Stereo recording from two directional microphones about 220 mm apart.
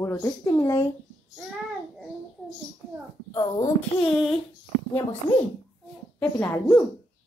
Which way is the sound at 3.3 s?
15° left (ahead or behind).